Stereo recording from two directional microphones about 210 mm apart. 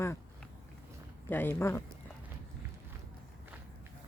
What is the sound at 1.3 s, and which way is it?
Speech, 10° left (ahead or behind).